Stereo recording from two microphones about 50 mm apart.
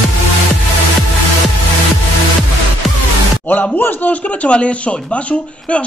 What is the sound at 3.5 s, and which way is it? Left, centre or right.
Speech, left.